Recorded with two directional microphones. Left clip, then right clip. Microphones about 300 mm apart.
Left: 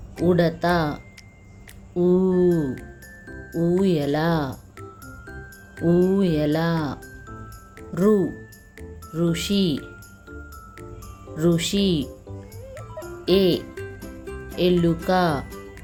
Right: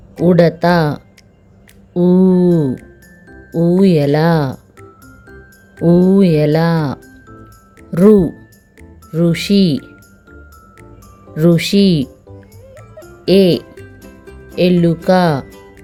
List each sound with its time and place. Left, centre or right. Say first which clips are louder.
0.3 s speech: right 9 dB; right
3.2 s music: right 8 dB; centre
3.8 s speech: right 10 dB; right
4.8 s music: right 1 dB; centre
6.1 s speech: right 10 dB; right
11.3 s speech: right 9 dB; right
12.0 s music: right 4 dB; centre
13.2 s speech: right 8 dB; right
13.7 s music: left 1 dB; centre
14.5 s speech: right 7 dB; right
15.4 s music: right 1 dB; centre